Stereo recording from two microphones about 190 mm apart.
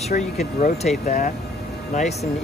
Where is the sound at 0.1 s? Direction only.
45° left (ahead or behind).